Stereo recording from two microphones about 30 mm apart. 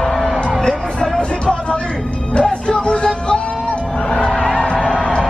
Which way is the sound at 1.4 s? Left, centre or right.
Left.